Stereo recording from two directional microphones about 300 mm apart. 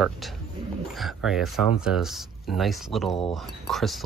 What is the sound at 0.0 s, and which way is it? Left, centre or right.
Speech, centre.